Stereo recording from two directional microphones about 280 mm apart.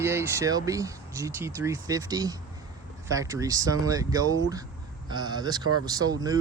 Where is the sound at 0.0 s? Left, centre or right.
Centre.